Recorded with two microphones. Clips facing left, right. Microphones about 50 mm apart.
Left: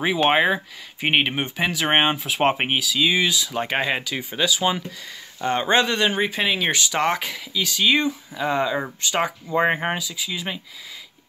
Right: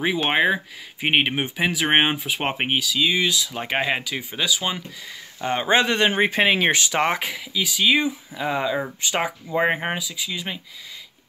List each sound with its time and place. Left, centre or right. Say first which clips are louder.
0.0 s speech: left 2 dB; centre
5.4 s speech: even; centre
5.9 s speech: right 2 dB; right
7.5 s speech: even; centre